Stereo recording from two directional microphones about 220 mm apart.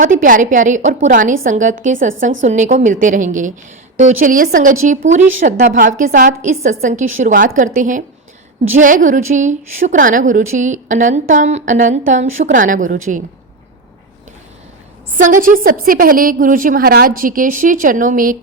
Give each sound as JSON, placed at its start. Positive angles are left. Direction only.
{"t": 0.0, "sound": "a woman's voice", "side_deg": -35}
{"t": 15.2, "sound": "a woman's voice", "side_deg": -40}